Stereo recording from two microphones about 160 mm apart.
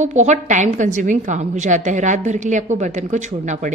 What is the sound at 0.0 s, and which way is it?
A woman's voice, 45° right (ahead or behind).